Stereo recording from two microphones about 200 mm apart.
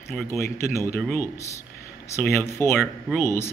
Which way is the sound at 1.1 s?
15° left (ahead or behind).